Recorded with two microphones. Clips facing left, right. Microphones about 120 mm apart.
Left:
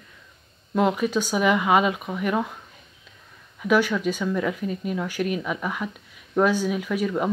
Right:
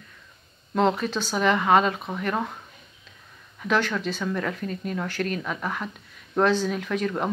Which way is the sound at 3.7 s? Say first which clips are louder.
Left 4 dB; 10° left (ahead or behind).